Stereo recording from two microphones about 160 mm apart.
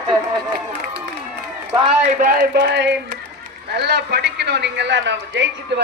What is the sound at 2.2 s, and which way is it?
Speech, 60° right (ahead or behind).